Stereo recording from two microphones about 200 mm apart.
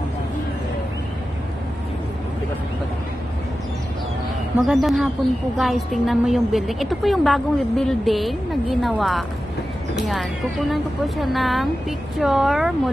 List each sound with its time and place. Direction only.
4.6 s a woman's voice: centre (ahead or behind)